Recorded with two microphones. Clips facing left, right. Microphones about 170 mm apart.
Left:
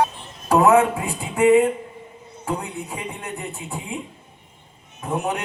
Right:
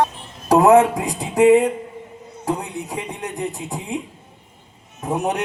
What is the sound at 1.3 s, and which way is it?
Speech, 30° right (ahead or behind).